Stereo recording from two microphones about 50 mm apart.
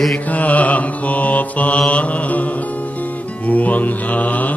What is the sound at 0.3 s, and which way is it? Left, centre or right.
Mantra, left.